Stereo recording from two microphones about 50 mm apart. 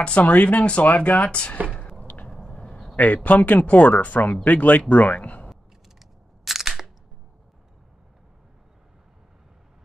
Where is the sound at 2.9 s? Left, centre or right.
Left.